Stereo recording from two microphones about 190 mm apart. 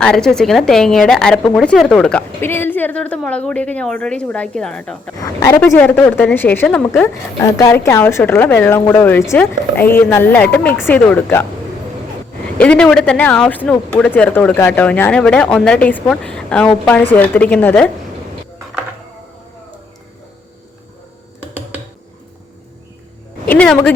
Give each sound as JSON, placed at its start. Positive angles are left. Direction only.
{"t": 0.0, "sound": "a woman's voice", "side_deg": 5}
{"t": 7.6, "sound": "speech", "side_deg": 15}
{"t": 12.5, "sound": "a woman's voice", "side_deg": 5}
{"t": 23.5, "sound": "speech", "side_deg": 5}